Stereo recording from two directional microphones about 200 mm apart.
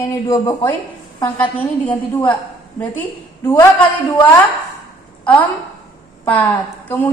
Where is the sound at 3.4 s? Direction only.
15° left (ahead or behind).